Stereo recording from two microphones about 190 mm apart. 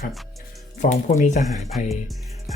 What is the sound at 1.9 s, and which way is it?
Speech, centre (ahead or behind).